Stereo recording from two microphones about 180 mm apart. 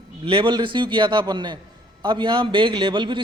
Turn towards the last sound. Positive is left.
turn(degrees=-25)  # may be behind; listen again after turning